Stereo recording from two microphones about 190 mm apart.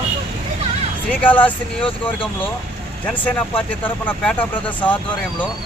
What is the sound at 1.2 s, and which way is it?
Speech, 10° left (ahead or behind).